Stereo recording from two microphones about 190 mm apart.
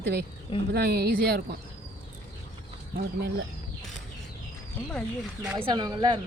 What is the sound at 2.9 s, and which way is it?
Speech, 60° right (ahead or behind).